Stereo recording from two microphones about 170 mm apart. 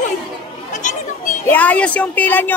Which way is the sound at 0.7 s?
50° left (ahead or behind).